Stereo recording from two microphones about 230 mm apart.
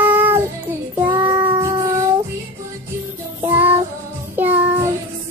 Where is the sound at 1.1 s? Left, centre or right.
Centre.